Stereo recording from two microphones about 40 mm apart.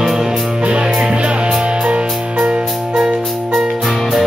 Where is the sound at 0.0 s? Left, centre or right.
Centre.